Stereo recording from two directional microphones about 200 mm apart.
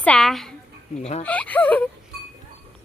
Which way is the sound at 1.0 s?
30° left (ahead or behind).